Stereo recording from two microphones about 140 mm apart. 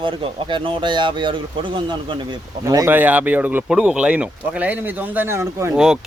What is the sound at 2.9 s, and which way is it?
Speech, 10° right (ahead or behind).